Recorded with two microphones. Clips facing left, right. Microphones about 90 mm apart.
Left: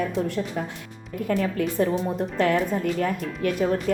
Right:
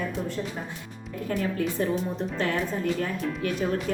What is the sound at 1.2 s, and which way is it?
Speech, 55° left (ahead or behind).